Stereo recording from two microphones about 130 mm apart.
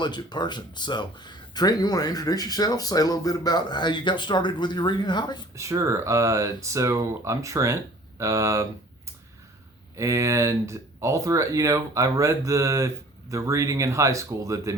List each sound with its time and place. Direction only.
0.0 s speech: 35° left (ahead or behind)
5.5 s speech: 25° right (ahead or behind)
9.9 s speech: 25° right (ahead or behind)